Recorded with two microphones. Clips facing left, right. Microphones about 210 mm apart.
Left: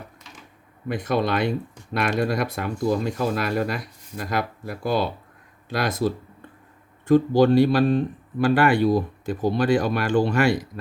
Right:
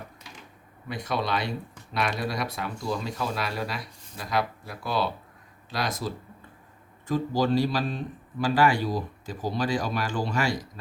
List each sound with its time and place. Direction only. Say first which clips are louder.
0.9 s a man's voice: left 6 dB; 55° left (ahead or behind)